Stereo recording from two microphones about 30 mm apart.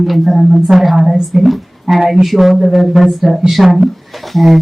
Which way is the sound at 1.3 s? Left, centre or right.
Centre.